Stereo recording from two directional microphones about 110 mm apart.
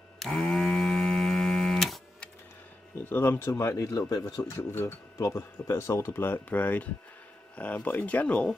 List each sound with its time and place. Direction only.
0.2 s mains hum: 5° left (ahead or behind)
3.1 s speech: 20° left (ahead or behind)